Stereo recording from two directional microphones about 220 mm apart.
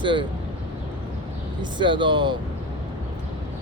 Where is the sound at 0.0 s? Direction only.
20° right (ahead or behind).